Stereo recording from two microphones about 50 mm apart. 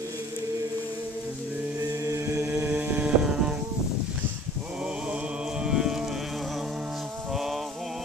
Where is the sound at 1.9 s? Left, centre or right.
Right.